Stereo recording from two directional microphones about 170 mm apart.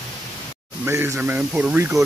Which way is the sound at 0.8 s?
15° right (ahead or behind).